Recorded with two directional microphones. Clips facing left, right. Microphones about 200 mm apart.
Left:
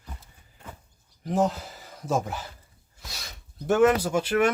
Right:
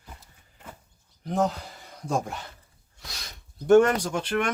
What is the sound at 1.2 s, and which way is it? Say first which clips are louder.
Speech: left 1 dB; centre (ahead or behind).